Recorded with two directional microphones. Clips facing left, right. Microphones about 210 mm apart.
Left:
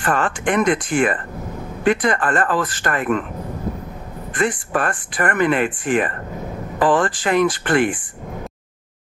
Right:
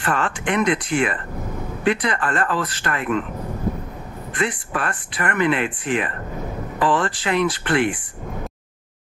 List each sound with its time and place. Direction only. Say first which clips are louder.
0.0 s speech: left 3 dB; 50° left (ahead or behind)
4.3 s speech: left 4 dB; 50° left (ahead or behind)